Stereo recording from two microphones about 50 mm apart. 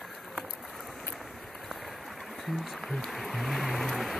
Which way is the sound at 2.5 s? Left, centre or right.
Centre.